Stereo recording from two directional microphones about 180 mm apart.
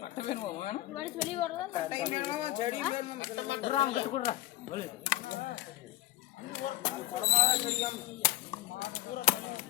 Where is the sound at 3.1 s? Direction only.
90° left.